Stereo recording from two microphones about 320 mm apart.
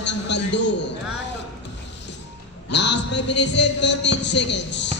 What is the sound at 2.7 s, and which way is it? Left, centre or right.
A man's voice, left.